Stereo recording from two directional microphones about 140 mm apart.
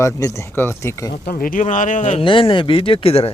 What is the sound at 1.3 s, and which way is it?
Speech, 85° left.